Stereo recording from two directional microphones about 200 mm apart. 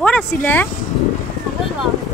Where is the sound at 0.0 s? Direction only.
5° left (ahead or behind).